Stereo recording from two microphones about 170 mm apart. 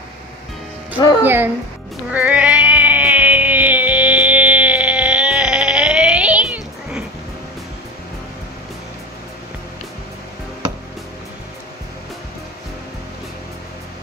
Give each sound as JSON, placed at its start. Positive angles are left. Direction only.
{"t": 1.2, "sound": "speech", "side_deg": -10}
{"t": 2.1, "sound": "music", "side_deg": -10}